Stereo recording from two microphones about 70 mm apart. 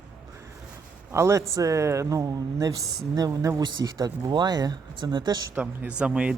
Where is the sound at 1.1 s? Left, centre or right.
Right.